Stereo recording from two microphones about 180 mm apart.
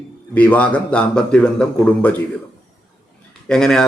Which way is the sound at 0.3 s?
10° left (ahead or behind).